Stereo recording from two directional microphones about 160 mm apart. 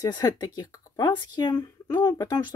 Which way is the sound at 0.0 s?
25° left (ahead or behind).